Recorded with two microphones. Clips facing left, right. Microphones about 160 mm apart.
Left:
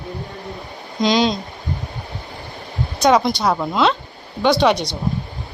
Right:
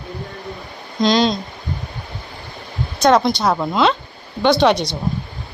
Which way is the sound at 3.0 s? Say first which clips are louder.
Right 1 dB; 10° left (ahead or behind).